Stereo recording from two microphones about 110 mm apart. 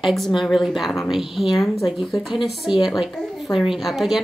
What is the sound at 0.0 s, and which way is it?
Speech, centre (ahead or behind).